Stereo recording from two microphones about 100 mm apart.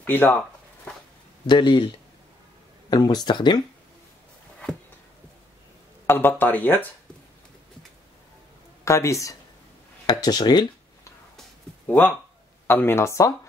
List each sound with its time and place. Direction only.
0.0 s speech: 20° left (ahead or behind)
1.5 s speech: 50° left (ahead or behind)
2.9 s speech: 45° left (ahead or behind)
6.0 s speech: 20° left (ahead or behind)
8.8 s speech: 30° left (ahead or behind)
10.0 s speech: 45° left (ahead or behind)
11.9 s speech: 15° left (ahead or behind)